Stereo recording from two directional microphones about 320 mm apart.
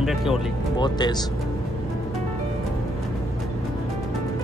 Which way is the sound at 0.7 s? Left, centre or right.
Centre.